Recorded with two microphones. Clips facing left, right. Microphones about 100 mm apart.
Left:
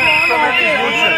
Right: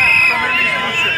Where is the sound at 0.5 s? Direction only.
25° left (ahead or behind).